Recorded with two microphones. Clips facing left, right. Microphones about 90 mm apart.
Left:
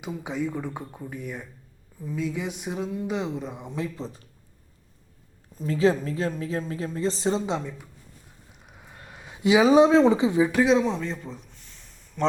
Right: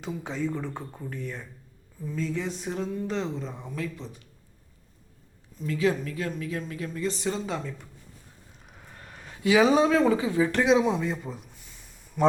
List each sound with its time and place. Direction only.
0.0 s speech: 10° left (ahead or behind); by 4.2 s 35° left (ahead or behind)
5.5 s speech: 30° left (ahead or behind)
8.6 s a sound: 5° left (ahead or behind)
9.7 s speech: 20° left (ahead or behind)
10.5 s speech: centre (ahead or behind)